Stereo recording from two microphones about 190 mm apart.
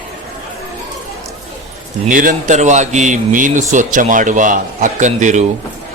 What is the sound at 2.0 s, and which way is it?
A man's voice, 45° right (ahead or behind).